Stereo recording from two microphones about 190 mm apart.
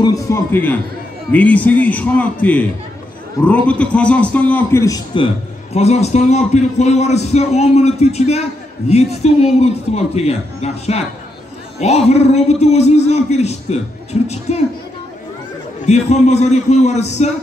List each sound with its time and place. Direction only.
0.0 s a man's voice: 15° left (ahead or behind)
3.6 s a man's voice: 5° left (ahead or behind); by 14.6 s 35° left (ahead or behind)
15.8 s a man's voice: 35° left (ahead or behind)